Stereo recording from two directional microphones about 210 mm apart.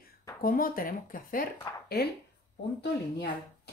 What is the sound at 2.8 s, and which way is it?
Speech, 50° left (ahead or behind).